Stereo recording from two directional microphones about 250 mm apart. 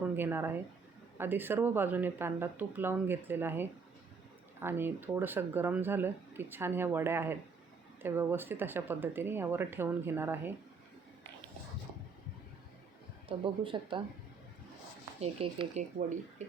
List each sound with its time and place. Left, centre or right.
0.0 s speech: centre
13.2 s speech: centre
15.2 s speech: right